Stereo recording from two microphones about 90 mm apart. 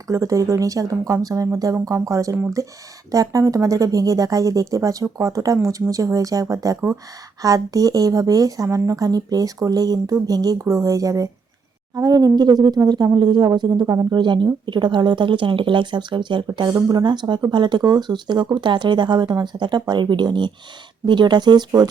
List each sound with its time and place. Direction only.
0.1 s speech: 35° right (ahead or behind)